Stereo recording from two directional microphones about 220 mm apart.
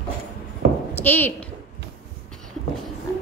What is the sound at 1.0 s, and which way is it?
Speech, 10° left (ahead or behind).